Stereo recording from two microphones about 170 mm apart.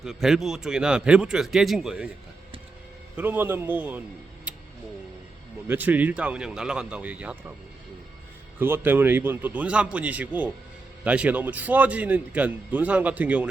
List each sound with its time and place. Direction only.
0.0 s speech: centre (ahead or behind)
3.2 s a man's voice: 10° right (ahead or behind)
4.5 s a sound: 5° right (ahead or behind)
5.6 s a man's voice: 10° right (ahead or behind)
8.5 s a man's voice: 10° right (ahead or behind)